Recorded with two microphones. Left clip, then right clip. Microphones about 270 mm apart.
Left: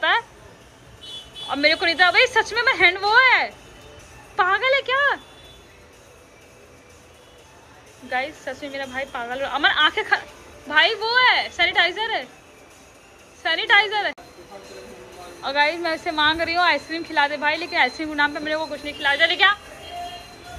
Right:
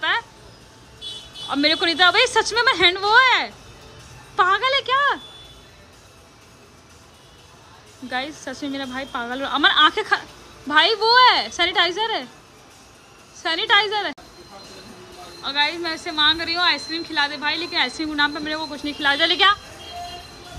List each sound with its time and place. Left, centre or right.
1.5 s speech: centre
8.1 s speech: centre
13.4 s speech: centre
15.4 s speech: centre